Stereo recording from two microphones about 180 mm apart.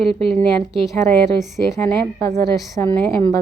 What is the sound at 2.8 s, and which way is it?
Music, 10° left (ahead or behind).